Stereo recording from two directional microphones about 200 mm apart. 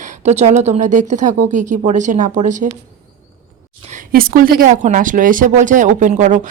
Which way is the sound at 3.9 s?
45° right (ahead or behind).